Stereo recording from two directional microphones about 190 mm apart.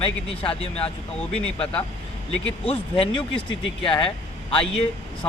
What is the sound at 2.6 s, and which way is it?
Speech, 30° left (ahead or behind).